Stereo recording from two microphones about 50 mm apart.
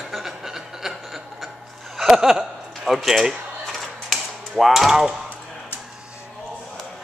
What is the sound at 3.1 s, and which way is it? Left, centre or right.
Speech, centre.